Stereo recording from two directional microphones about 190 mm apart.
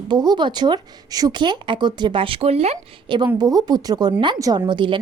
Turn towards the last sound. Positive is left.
turn(degrees=-25)  # may be behind; listen again after turning